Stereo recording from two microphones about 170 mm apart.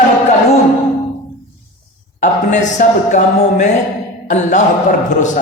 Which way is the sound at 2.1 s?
45° left (ahead or behind).